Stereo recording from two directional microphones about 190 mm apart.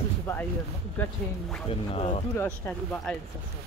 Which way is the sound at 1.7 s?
30° left (ahead or behind).